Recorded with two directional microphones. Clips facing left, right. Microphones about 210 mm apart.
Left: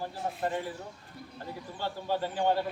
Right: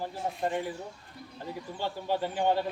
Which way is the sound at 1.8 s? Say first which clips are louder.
Right 1 dB; 15° right (ahead or behind).